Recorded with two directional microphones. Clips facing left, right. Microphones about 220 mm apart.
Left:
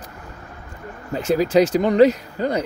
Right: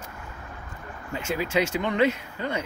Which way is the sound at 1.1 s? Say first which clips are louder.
Left 9 dB; 35° left (ahead or behind).